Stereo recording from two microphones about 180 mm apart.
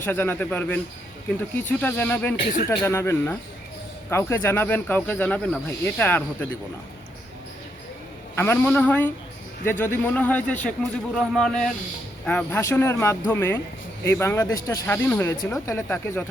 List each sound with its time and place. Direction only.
0.0 s speech: 10° left (ahead or behind)
1.8 s speech: 10° left (ahead or behind)
8.4 s a man's voice: 10° left (ahead or behind)